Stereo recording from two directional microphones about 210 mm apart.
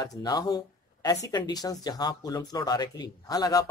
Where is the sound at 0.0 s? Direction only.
20° left (ahead or behind).